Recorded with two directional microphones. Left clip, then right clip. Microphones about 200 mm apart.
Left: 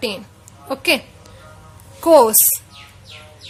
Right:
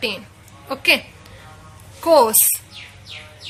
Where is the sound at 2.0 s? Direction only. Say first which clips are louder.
Left 3 dB; 45° left (ahead or behind).